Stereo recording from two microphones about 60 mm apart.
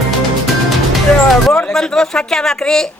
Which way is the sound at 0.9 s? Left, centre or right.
Centre.